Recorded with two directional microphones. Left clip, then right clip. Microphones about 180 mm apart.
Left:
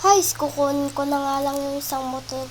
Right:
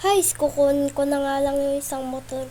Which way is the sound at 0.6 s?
35° right (ahead or behind).